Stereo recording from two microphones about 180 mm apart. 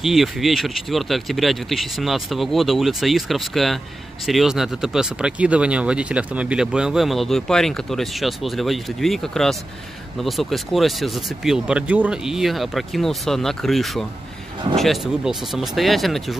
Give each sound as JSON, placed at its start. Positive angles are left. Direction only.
{"t": 0.0, "sound": "speech", "side_deg": 0}